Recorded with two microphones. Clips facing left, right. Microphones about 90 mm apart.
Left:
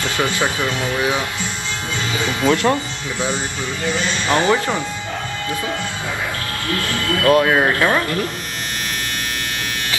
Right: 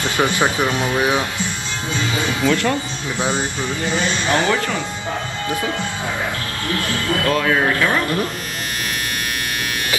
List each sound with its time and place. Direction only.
0.0 s speech: 20° right (ahead or behind)
2.4 s speech: 20° left (ahead or behind)
3.2 s speech: 20° right (ahead or behind)
4.3 s speech: 20° left (ahead or behind)
7.2 s speech: 30° left (ahead or behind)